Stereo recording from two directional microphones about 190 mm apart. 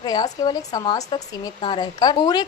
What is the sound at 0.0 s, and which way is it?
Speech, 20° left (ahead or behind).